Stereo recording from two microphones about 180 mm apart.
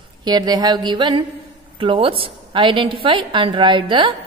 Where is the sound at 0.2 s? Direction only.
25° right (ahead or behind).